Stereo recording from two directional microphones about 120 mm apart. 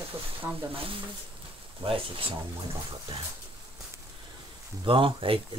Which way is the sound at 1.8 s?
50° right (ahead or behind).